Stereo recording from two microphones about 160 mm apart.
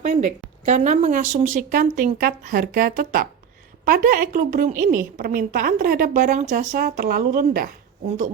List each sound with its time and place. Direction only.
0.0 s a woman's voice: 45° right (ahead or behind)